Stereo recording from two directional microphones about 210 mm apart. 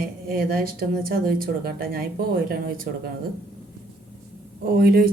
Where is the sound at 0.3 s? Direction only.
45° right (ahead or behind).